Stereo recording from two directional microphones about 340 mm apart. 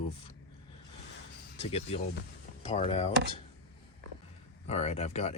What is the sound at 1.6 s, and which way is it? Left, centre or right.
Speech, centre.